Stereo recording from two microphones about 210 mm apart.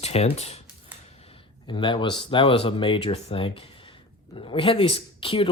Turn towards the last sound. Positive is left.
turn(degrees=25)  # may be behind; listen again after turning